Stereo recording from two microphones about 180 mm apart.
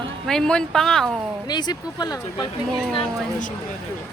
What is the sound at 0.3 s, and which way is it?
Speech, 5° left (ahead or behind).